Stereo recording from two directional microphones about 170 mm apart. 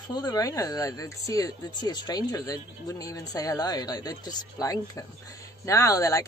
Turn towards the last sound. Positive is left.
turn(degrees=20)  # may be behind; listen again after turning